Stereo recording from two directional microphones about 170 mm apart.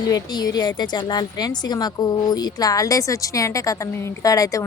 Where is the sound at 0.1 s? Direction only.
25° left (ahead or behind).